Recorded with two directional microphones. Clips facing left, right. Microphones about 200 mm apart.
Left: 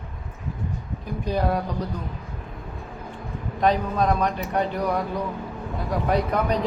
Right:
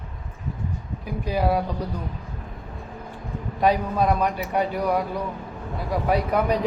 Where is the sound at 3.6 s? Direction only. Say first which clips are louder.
Right 1 dB; 10° right (ahead or behind).